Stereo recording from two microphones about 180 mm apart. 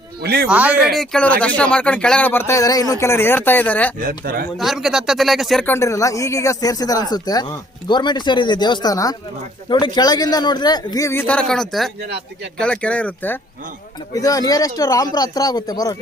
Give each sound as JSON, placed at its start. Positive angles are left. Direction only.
{"t": 0.2, "sound": "a man's voice", "side_deg": -60}
{"t": 0.4, "sound": "speech", "side_deg": -10}
{"t": 0.9, "sound": "speech", "side_deg": 5}
{"t": 4.2, "sound": "speech", "side_deg": -55}
{"t": 4.5, "sound": "speech", "side_deg": 0}
{"t": 14.1, "sound": "speech", "side_deg": 20}